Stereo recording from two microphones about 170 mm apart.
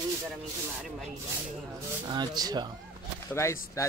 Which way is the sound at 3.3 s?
15° left (ahead or behind).